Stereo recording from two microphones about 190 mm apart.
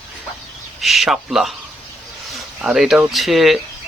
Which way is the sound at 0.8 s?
Centre (ahead or behind).